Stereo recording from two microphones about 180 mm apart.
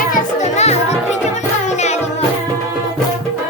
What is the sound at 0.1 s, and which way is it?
Music, 40° left (ahead or behind).